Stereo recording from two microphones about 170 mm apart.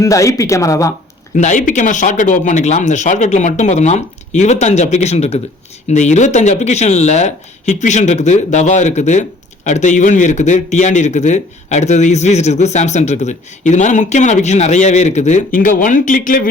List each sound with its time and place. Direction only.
0.0 s speech: 20° left (ahead or behind)
1.4 s a man's voice: 45° left (ahead or behind)